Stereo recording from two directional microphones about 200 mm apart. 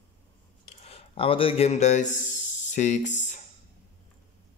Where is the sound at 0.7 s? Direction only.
25° left (ahead or behind).